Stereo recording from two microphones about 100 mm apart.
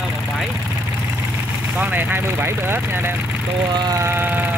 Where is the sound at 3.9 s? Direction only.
25° right (ahead or behind).